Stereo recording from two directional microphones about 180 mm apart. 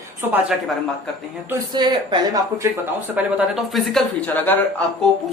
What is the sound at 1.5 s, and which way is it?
Speech, 25° right (ahead or behind).